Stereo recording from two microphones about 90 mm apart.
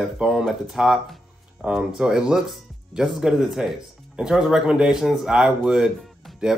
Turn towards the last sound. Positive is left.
turn(degrees=-5)  # may be behind; listen again after turning